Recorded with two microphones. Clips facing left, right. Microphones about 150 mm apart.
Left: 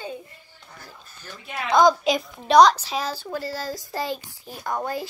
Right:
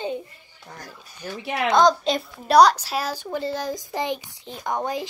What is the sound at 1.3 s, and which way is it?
Speech, 75° right (ahead or behind).